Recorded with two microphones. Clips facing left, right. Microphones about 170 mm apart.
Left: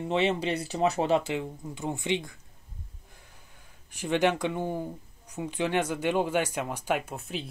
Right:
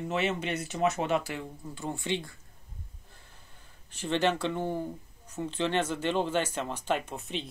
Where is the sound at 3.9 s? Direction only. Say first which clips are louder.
Left 2 dB; 10° left (ahead or behind).